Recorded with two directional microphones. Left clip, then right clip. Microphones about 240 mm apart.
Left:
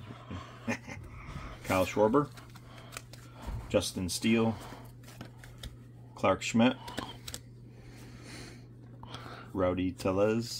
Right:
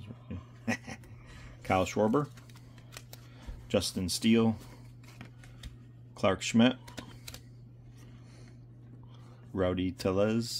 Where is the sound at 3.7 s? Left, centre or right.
Right.